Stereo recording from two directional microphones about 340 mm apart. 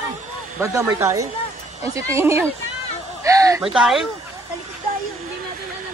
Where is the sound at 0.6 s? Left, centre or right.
Centre.